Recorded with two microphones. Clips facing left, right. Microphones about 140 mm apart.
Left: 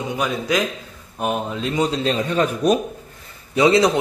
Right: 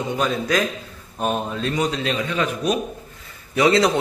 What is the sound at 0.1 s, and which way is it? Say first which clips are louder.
A man's voice: even; 10° left (ahead or behind).